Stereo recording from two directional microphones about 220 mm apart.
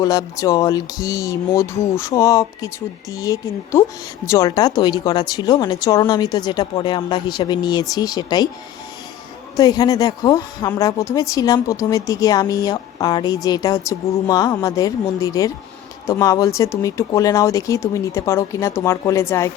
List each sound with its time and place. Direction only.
0.0 s speech: 15° left (ahead or behind)
9.6 s speech: 15° left (ahead or behind)